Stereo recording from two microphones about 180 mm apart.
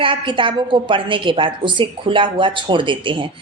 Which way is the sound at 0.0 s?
30° right (ahead or behind).